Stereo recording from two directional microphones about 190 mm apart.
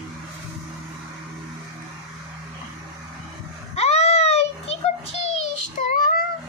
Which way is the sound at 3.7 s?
35° left (ahead or behind).